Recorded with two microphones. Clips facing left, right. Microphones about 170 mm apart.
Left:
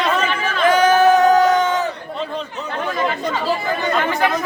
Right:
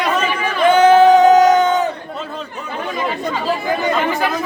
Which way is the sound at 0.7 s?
25° right (ahead or behind).